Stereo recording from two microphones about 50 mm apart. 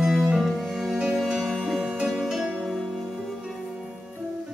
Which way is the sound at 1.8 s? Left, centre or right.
Centre.